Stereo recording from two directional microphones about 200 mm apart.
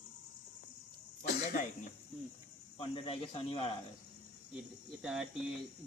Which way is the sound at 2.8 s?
25° left (ahead or behind).